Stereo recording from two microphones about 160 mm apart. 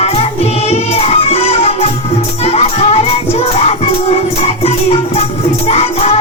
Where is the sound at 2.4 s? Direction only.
40° left (ahead or behind).